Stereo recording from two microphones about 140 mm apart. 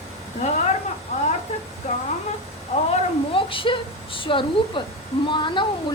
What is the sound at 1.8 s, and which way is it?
Speech, 55° left (ahead or behind).